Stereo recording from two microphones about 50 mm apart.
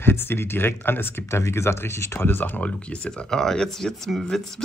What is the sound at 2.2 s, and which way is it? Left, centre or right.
Speech, left.